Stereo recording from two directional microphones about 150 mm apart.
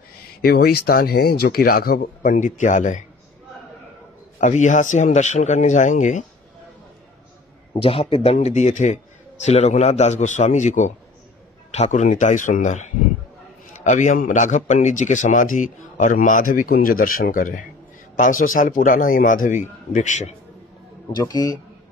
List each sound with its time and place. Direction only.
0.4 s speech: 90° left; by 3.0 s 55° left (ahead or behind)
4.4 s speech: 55° left (ahead or behind)
7.7 s a man's voice: 40° left (ahead or behind)
21.2 s a man's voice: 25° left (ahead or behind)